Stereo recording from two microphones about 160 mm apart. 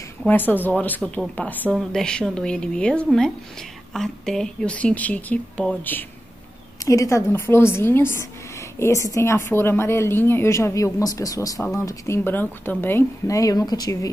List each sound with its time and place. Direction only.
0.3 s a woman's voice: 10° left (ahead or behind)